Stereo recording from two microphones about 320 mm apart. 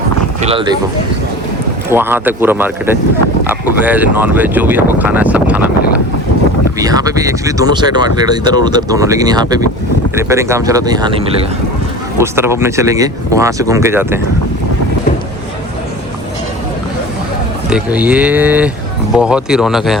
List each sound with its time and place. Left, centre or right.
0.4 s speech: centre
1.9 s speech: centre
6.7 s speech: centre
17.7 s speech: centre